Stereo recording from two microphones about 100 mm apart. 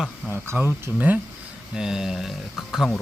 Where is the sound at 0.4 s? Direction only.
20° right (ahead or behind).